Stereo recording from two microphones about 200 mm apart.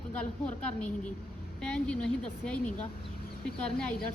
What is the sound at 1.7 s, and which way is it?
Speech, 5° left (ahead or behind).